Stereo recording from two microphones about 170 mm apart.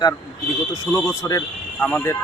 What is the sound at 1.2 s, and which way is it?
Speech, 20° left (ahead or behind).